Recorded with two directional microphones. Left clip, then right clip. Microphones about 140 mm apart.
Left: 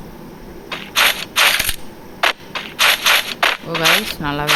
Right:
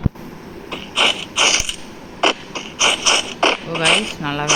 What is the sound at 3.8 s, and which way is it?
Speech, 10° left (ahead or behind).